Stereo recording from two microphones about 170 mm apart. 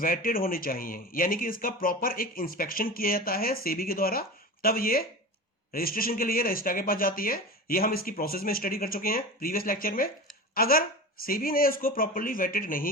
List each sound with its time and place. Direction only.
0.0 s speech: 55° left (ahead or behind)